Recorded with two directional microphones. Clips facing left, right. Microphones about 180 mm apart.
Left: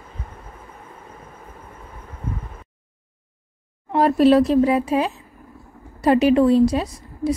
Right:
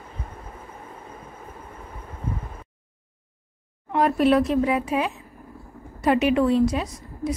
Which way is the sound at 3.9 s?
35° left (ahead or behind).